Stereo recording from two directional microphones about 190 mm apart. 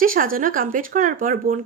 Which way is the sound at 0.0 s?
45° right (ahead or behind).